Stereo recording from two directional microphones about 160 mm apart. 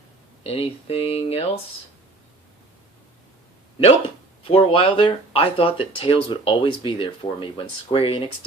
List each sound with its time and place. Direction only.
0.4 s speech: 35° left (ahead or behind)
4.4 s speech: 35° left (ahead or behind)